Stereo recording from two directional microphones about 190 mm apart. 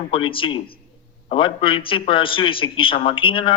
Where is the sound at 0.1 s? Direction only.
25° left (ahead or behind).